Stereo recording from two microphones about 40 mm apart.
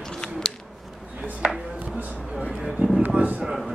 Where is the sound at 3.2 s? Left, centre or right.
Right.